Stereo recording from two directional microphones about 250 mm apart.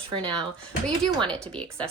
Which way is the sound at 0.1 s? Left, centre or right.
Centre.